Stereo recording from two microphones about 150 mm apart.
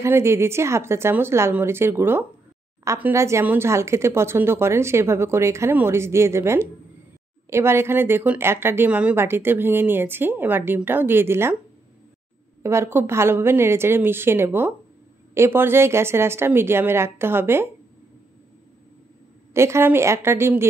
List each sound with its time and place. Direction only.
0.0 s speech: 15° right (ahead or behind)
12.6 s speech: 15° right (ahead or behind)
19.5 s speech: 15° right (ahead or behind)